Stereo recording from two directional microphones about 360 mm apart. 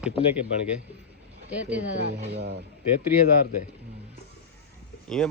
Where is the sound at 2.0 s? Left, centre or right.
Right.